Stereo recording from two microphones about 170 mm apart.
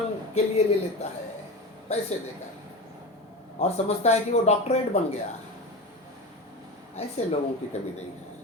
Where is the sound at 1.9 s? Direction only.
40° left (ahead or behind).